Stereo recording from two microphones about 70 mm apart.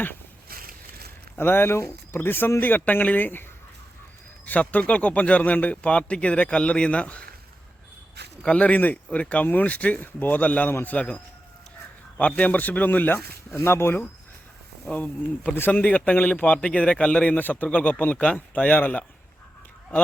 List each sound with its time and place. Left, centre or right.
1.4 s a man's voice: left
4.4 s speech: left
8.4 s a man's voice: centre
13.5 s speech: left
14.8 s a man's voice: centre
15.5 s a man's voice: left
15.8 s a man's voice: centre